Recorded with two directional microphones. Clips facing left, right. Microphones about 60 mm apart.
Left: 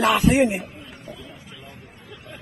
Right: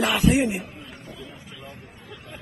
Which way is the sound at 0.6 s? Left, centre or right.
Centre.